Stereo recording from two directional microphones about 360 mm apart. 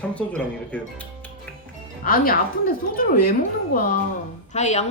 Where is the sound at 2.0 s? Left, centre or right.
Left.